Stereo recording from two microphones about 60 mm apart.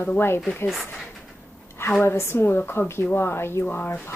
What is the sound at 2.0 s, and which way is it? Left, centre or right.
A woman's voice, left.